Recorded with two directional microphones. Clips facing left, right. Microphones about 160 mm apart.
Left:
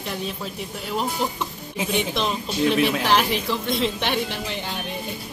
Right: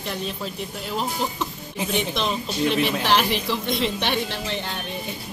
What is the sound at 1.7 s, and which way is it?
A woman's voice, 5° left (ahead or behind).